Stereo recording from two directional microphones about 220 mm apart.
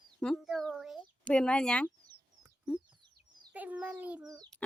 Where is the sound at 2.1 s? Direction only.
20° right (ahead or behind).